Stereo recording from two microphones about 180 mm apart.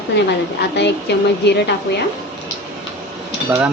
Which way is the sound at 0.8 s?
70° left (ahead or behind).